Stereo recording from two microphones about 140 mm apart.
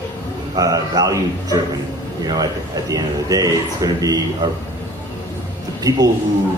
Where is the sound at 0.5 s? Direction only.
25° right (ahead or behind).